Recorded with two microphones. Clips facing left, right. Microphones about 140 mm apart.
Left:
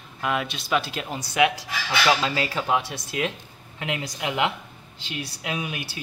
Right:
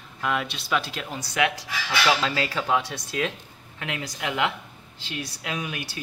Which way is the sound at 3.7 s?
20° left (ahead or behind).